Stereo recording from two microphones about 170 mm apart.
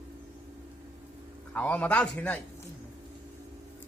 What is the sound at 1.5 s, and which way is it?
Speech, 10° left (ahead or behind).